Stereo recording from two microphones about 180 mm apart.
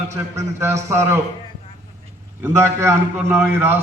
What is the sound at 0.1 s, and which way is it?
A man's voice, 15° right (ahead or behind).